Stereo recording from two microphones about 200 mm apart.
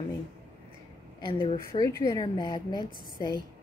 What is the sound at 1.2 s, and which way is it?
A woman's voice, 20° left (ahead or behind).